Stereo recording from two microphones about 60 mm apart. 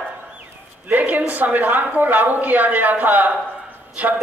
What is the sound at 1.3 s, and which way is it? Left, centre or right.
Speech, right.